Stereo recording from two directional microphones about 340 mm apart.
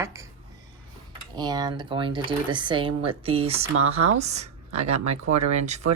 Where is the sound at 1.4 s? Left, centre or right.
Centre.